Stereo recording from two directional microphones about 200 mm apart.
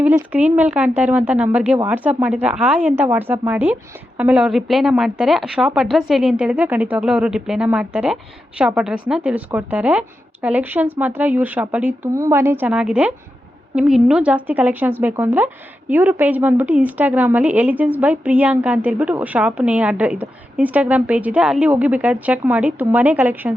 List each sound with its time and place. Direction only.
0.3 s a woman's voice: 5° right (ahead or behind)